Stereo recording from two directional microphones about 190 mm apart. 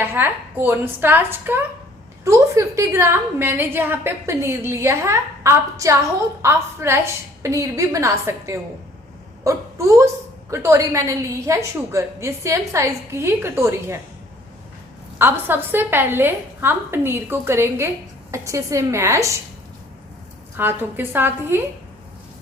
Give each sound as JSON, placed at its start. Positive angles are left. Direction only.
{"t": 0.0, "sound": "a woman's voice", "side_deg": -10}
{"t": 15.2, "sound": "a woman's voice", "side_deg": -10}
{"t": 20.6, "sound": "a woman's voice", "side_deg": -10}